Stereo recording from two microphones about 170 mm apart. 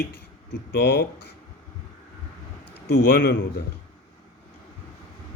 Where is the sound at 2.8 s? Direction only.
90° left.